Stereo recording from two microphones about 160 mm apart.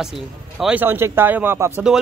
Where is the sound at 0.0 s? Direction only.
Centre (ahead or behind).